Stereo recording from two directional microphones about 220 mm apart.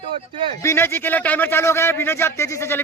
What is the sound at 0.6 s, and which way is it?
A man's voice, 10° left (ahead or behind).